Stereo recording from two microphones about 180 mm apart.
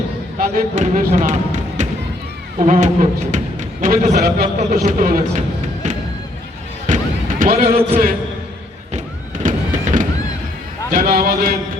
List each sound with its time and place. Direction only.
0.3 s speech: 50° right (ahead or behind)
4.8 s speech: 50° right (ahead or behind)
6.8 s music: 45° right (ahead or behind)
9.4 s music: 45° right (ahead or behind)
10.9 s speech: 55° right (ahead or behind)